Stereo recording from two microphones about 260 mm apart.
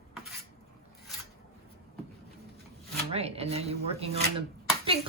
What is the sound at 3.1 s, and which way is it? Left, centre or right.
Speech, right.